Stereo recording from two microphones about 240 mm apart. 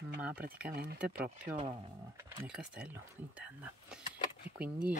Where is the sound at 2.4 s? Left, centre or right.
Centre.